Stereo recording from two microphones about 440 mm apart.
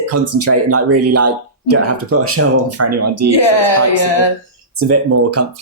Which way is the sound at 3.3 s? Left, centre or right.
Left.